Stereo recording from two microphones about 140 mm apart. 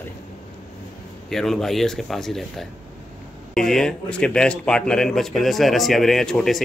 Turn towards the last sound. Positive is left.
turn(degrees=5)  # may be behind; listen again after turning